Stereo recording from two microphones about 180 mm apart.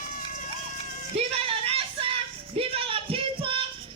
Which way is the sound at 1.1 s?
35° right (ahead or behind).